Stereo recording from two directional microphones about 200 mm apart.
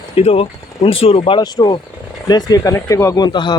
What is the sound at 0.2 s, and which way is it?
Speech, 30° left (ahead or behind).